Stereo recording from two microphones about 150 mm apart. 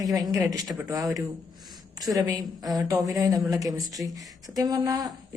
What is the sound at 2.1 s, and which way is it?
Speech, 25° right (ahead or behind).